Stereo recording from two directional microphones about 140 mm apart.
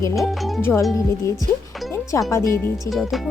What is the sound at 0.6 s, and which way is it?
Speech, 15° left (ahead or behind).